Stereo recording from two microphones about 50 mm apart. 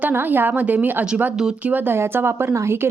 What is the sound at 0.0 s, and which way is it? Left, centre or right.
A woman's voice, right.